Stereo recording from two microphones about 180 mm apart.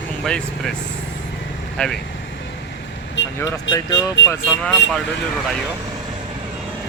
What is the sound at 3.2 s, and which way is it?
Vehicle, 90° left.